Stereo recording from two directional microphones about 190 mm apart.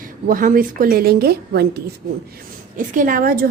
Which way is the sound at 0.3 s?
45° right (ahead or behind).